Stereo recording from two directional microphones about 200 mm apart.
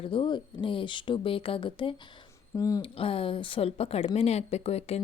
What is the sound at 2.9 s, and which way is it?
Speech, 30° left (ahead or behind).